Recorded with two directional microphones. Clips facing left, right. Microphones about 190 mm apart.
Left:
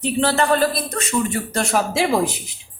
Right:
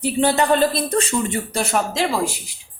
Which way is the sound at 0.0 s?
15° right (ahead or behind).